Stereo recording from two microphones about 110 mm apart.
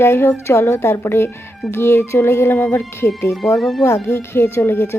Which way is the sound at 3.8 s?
25° left (ahead or behind).